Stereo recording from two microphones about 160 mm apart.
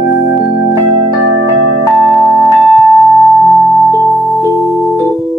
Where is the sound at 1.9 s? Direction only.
Centre (ahead or behind).